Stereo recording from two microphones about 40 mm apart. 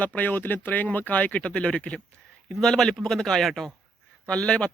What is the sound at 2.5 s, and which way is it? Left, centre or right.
Speech, centre.